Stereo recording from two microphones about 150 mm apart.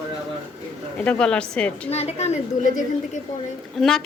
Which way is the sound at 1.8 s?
45° left (ahead or behind).